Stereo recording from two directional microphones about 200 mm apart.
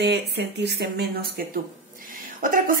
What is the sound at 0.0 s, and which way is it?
Speech, 55° right (ahead or behind).